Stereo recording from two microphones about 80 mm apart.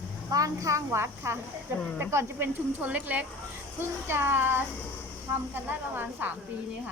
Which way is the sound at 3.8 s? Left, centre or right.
Right.